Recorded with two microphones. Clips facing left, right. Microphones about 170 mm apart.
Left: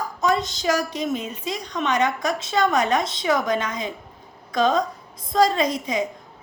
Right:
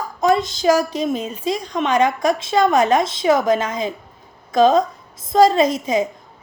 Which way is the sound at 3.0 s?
90° right.